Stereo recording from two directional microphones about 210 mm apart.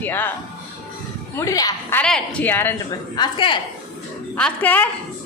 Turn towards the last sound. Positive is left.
turn(degrees=10)  # may be behind; listen again after turning